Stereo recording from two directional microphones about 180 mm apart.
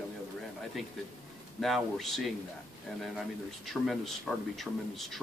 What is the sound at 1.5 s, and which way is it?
Speech, centre (ahead or behind).